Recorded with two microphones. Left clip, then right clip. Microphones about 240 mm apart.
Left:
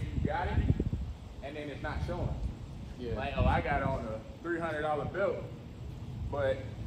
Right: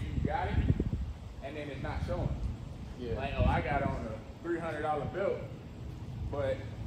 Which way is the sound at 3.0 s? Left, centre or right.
Centre.